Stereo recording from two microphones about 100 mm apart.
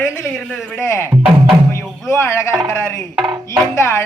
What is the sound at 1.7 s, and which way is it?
Music, 30° left (ahead or behind).